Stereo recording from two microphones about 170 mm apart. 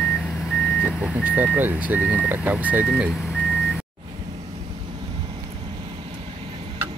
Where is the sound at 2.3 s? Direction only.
10° right (ahead or behind).